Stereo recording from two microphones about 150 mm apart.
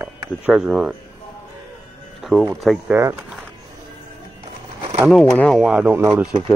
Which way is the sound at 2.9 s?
20° right (ahead or behind).